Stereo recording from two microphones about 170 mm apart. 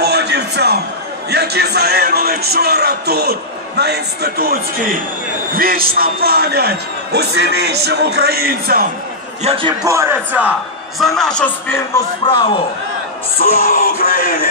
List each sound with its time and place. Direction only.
0.0 s a sound: 75° right (ahead or behind)
1.3 s a man's voice: 75° right (ahead or behind)
9.4 s a man's voice: 35° right (ahead or behind)
9.8 s a man's voice: 15° right (ahead or behind)
11.0 s speech: centre (ahead or behind)
12.2 s a man's voice: 25° left (ahead or behind)
13.4 s music: 60° left (ahead or behind)